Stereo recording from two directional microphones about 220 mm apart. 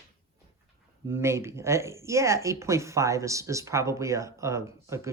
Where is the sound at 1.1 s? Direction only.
10° right (ahead or behind).